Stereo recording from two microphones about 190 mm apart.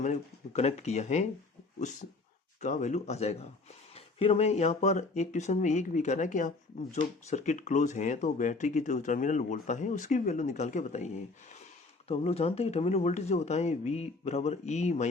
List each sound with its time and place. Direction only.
0.0 s speech: 35° left (ahead or behind)